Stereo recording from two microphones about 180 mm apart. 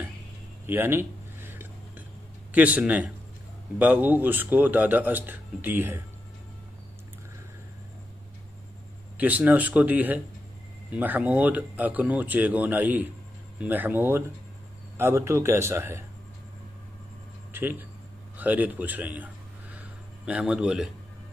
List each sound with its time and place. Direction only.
0.7 s a sound: 10° right (ahead or behind)
2.5 s speech: 10° right (ahead or behind)
9.1 s speech: 10° right (ahead or behind)
17.5 s speech: 10° right (ahead or behind)